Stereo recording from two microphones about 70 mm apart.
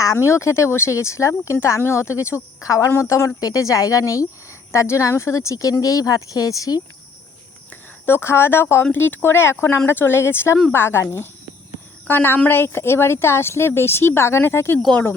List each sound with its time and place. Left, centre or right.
0.3 s speech: left
8.0 s a woman's voice: left